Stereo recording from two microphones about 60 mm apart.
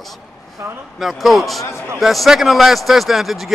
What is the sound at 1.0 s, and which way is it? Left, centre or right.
A man's voice, centre.